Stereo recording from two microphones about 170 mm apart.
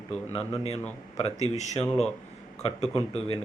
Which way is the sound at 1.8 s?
5° left (ahead or behind).